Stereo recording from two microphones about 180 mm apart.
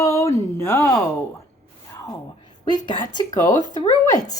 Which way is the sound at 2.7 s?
25° left (ahead or behind).